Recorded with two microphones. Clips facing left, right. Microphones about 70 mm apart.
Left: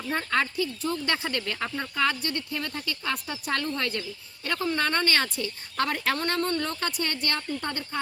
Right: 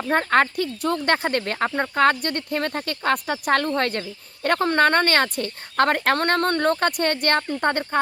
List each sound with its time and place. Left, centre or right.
0.0 s speech: right